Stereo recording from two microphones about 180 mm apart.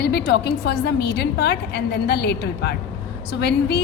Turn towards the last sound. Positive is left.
turn(degrees=65)  # may be behind; listen again after turning